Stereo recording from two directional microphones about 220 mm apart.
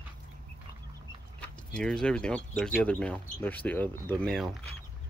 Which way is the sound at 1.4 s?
5° left (ahead or behind).